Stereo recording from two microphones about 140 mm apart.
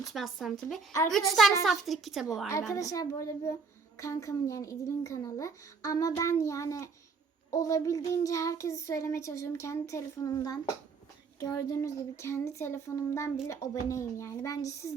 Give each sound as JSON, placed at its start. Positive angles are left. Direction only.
{"t": 0.1, "sound": "speech", "side_deg": 0}
{"t": 2.5, "sound": "a child's voice", "side_deg": 20}